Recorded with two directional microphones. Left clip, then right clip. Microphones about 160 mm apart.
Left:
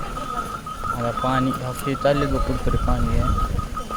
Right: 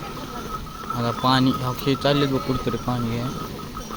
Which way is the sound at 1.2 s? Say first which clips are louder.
Right 3 dB; 30° right (ahead or behind).